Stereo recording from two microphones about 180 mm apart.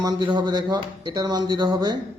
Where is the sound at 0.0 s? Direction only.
25° right (ahead or behind).